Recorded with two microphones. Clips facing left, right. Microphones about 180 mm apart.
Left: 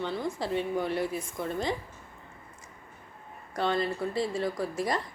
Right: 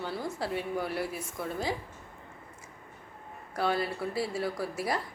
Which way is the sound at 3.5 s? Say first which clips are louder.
Left 1 dB; 5° right (ahead or behind).